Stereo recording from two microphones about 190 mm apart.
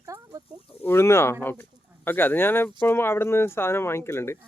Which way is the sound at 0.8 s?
10° left (ahead or behind).